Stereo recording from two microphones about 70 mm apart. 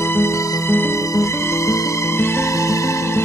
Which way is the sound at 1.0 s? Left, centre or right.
Left.